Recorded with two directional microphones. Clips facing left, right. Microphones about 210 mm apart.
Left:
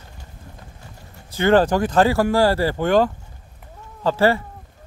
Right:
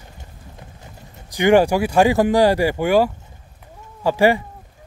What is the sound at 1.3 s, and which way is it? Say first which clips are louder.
Speech: right 2 dB; 15° right (ahead or behind).